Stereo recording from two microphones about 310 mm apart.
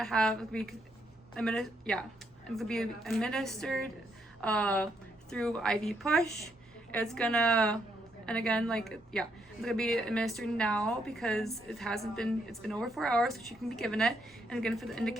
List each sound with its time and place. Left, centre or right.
0.0 s a woman's voice: centre